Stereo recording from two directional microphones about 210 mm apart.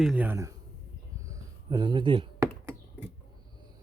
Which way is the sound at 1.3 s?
20° right (ahead or behind).